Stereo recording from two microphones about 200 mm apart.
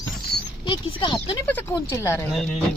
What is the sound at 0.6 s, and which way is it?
Speech, 25° left (ahead or behind).